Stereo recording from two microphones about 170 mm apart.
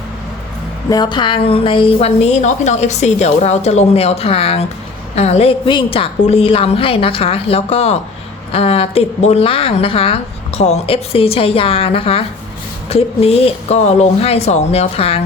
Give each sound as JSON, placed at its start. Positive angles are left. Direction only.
{"t": 0.9, "sound": "a woman's voice", "side_deg": 25}